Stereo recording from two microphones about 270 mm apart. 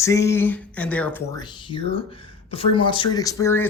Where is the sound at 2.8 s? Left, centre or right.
Centre.